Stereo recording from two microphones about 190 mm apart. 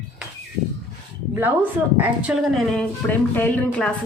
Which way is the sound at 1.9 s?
5° right (ahead or behind).